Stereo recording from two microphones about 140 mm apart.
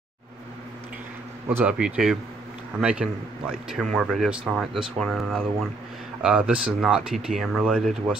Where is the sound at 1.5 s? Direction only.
10° right (ahead or behind).